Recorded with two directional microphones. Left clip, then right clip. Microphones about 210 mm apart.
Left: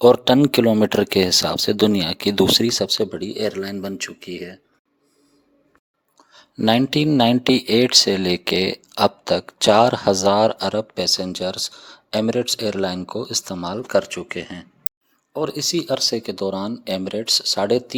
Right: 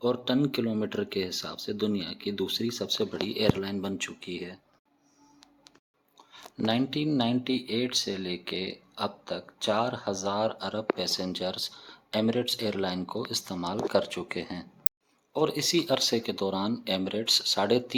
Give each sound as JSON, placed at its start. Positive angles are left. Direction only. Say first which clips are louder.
{"t": 0.0, "sound": "speech", "louder": "left 14 dB", "side_deg": 55}
{"t": 6.7, "sound": "speech", "louder": "left 11 dB", "side_deg": 45}
{"t": 13.8, "sound": "speech", "louder": "left 8 dB", "side_deg": 20}